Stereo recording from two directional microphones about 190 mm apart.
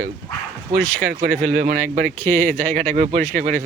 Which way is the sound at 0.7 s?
50° right (ahead or behind).